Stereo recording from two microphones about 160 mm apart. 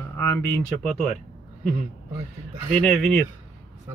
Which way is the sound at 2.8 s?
5° left (ahead or behind).